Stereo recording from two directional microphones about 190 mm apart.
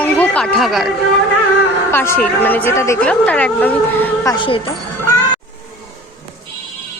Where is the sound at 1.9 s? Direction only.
10° left (ahead or behind).